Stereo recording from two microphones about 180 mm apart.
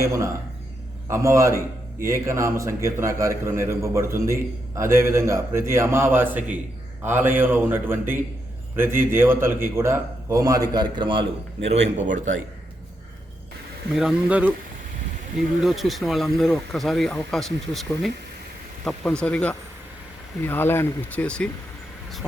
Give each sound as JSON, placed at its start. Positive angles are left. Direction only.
{"t": 0.0, "sound": "a man's voice", "side_deg": -15}
{"t": 13.9, "sound": "speech", "side_deg": -5}
{"t": 15.6, "sound": "speech", "side_deg": 0}